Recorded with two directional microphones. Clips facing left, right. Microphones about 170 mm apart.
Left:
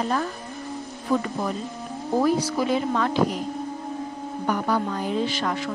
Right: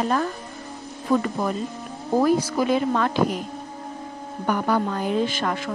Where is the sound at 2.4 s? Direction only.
55° right (ahead or behind).